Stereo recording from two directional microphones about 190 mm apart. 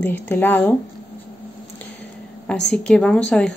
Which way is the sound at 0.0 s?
10° left (ahead or behind).